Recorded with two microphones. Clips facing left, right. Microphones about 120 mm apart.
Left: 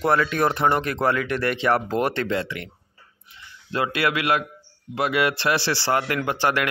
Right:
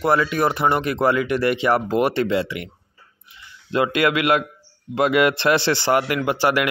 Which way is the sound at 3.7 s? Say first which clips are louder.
Right 4 dB; 20° right (ahead or behind).